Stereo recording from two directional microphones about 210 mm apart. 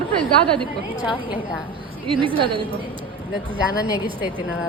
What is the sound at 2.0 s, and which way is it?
Speech, 25° right (ahead or behind).